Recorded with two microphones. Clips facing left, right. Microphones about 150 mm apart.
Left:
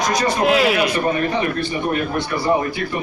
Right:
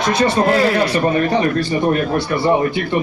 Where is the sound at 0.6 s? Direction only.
90° left.